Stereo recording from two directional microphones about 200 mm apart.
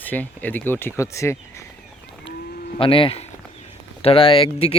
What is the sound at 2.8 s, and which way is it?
Speech, 25° left (ahead or behind).